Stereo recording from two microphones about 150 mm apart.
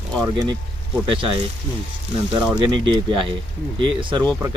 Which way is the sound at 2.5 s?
30° right (ahead or behind).